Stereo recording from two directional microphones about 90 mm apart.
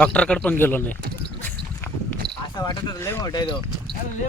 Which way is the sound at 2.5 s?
50° left (ahead or behind).